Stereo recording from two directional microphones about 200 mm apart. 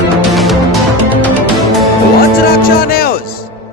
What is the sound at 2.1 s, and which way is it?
Music, 50° left (ahead or behind).